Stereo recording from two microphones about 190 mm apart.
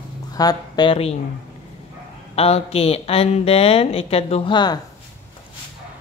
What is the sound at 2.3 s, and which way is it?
Speech, 30° left (ahead or behind).